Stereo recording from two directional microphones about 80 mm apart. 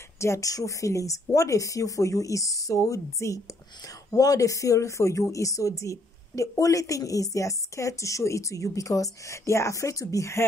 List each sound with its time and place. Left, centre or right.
0.2 s a woman's voice: left